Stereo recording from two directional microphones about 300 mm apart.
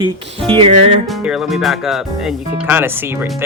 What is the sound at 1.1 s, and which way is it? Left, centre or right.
Speech, centre.